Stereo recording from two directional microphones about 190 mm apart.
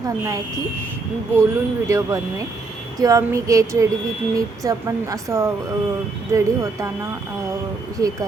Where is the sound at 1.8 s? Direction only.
15° right (ahead or behind).